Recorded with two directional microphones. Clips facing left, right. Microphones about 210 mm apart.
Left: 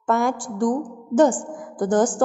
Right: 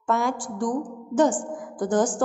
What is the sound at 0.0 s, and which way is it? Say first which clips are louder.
A woman's voice: left 3 dB; 50° left (ahead or behind).